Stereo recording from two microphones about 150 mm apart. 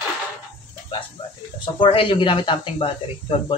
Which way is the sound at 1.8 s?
35° left (ahead or behind).